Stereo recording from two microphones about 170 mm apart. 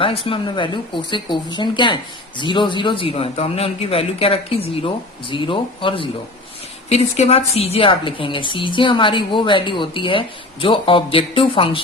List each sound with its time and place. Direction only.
0.0 s a woman's voice: 30° left (ahead or behind)